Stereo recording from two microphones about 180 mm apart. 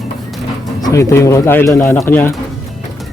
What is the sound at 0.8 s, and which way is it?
Speech, 15° left (ahead or behind).